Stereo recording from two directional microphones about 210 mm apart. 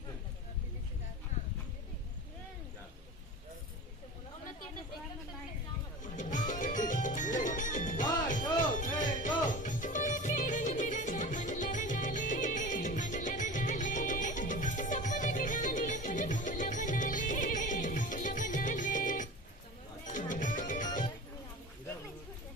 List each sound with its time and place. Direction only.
6.0 s music: 35° left (ahead or behind)